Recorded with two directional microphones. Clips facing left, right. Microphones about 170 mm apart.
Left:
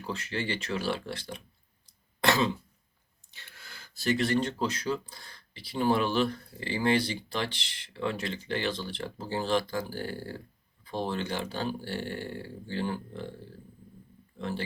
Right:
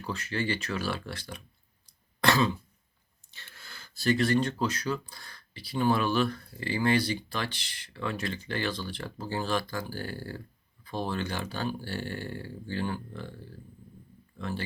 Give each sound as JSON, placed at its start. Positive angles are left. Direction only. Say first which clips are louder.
{"t": 0.0, "sound": "speech", "louder": "right 1 dB", "side_deg": 25}
{"t": 1.9, "sound": "throat clearing", "louder": "even", "side_deg": 20}
{"t": 3.3, "sound": "speech", "louder": "right 1 dB", "side_deg": 15}
{"t": 14.3, "sound": "speech", "louder": "left 1 dB", "side_deg": 25}